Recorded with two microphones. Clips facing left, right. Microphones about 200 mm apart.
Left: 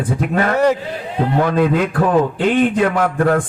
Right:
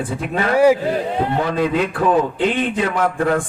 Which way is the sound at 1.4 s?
55° left (ahead or behind).